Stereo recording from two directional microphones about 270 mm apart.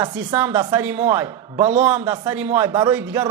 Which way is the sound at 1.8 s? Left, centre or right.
Centre.